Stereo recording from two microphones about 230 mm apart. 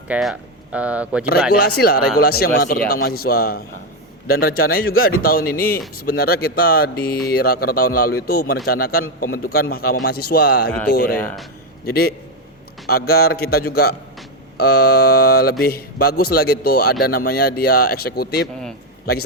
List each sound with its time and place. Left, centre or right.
0.1 s speech: centre
1.5 s a man's voice: left
10.7 s speech: centre
10.9 s speech: left
11.2 s speech: centre
11.9 s a man's voice: left